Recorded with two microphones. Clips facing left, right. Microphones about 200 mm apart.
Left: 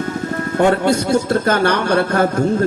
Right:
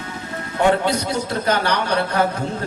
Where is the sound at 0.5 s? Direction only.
50° left (ahead or behind).